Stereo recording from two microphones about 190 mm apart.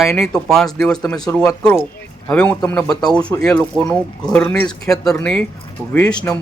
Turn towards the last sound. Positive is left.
turn(degrees=10)  # may be behind; listen again after turning